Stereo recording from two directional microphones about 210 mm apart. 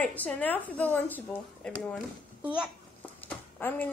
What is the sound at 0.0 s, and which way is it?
A woman's voice, 5° left (ahead or behind).